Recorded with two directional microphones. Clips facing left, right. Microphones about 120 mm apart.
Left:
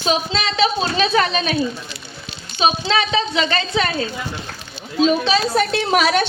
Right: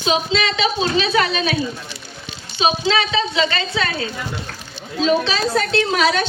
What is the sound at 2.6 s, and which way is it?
A woman's voice, 35° left (ahead or behind).